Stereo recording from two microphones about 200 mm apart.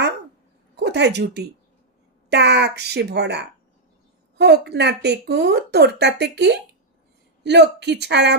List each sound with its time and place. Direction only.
0.8 s a woman's voice: 55° right (ahead or behind)